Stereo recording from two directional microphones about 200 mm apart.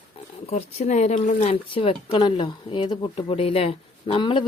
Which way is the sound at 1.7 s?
30° left (ahead or behind).